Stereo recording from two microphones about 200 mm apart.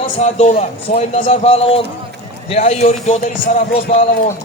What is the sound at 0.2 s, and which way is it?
A man's voice, 35° left (ahead or behind).